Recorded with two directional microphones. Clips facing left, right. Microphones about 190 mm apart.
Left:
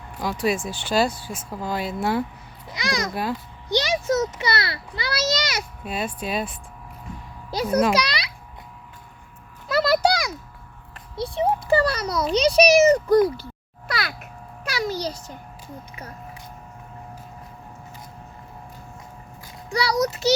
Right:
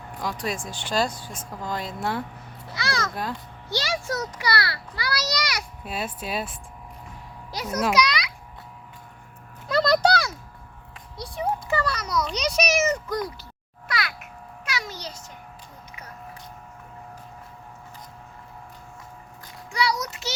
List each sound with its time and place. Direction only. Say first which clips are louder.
0.2 s speech: left 6 dB; 5° left (ahead or behind)
2.6 s babbling: left 2 dB; 15° left (ahead or behind)
3.7 s a child's voice: left 6 dB; 20° left (ahead or behind)
5.8 s speech: left 3 dB; 5° right (ahead or behind)
7.5 s a child's voice: left 4 dB; 30° left (ahead or behind)
9.6 s a sound: left 1 dB; 5° left (ahead or behind)
11.2 s a sound: left 5 dB; 30° left (ahead or behind)
19.7 s a child's voice: left 5 dB; 35° left (ahead or behind)